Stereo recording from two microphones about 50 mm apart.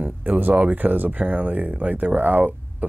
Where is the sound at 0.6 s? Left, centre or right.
Right.